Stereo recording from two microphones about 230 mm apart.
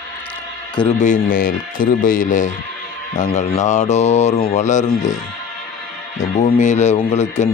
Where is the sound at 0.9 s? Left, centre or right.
Left.